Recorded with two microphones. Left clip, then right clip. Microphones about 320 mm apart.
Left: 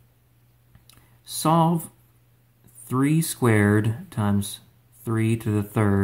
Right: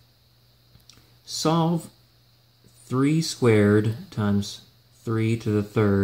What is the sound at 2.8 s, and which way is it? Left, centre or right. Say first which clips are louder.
Speech: even; centre.